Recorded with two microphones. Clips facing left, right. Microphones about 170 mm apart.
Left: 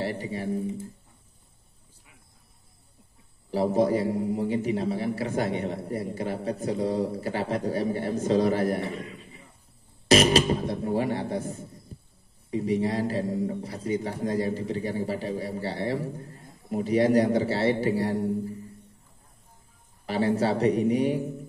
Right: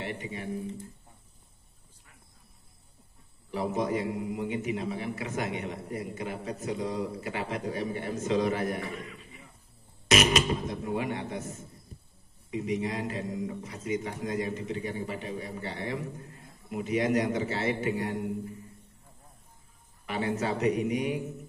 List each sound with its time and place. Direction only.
0.0 s speech: 35° left (ahead or behind)
3.5 s speech: 35° left (ahead or behind)
20.1 s speech: 35° left (ahead or behind)